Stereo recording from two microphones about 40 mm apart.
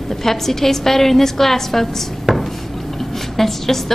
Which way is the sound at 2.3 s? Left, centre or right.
Centre.